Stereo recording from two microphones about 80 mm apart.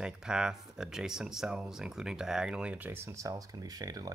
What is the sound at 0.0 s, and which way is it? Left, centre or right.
Speech, centre.